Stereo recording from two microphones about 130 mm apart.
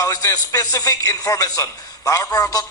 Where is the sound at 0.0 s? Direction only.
25° left (ahead or behind).